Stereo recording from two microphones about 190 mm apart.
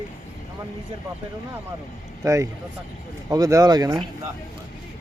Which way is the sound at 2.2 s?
15° right (ahead or behind).